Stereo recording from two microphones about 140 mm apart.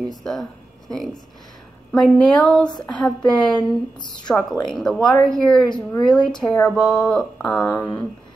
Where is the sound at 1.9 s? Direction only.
5° left (ahead or behind).